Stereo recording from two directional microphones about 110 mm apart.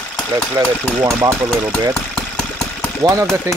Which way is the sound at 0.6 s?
30° right (ahead or behind).